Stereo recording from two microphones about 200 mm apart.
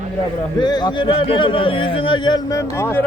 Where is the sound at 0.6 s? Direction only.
20° left (ahead or behind).